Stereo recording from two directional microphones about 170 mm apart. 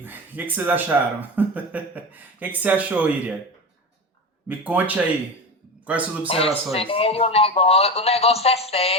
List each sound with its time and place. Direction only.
0.0 s speech: 10° right (ahead or behind)
4.4 s a man's voice: 10° right (ahead or behind)
6.2 s speech: 35° left (ahead or behind)